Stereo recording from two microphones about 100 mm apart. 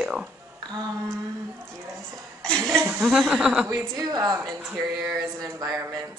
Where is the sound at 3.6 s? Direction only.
40° right (ahead or behind).